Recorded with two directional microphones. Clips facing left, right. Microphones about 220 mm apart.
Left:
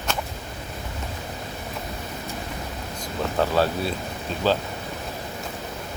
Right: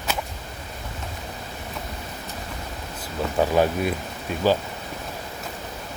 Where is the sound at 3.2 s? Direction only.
15° right (ahead or behind).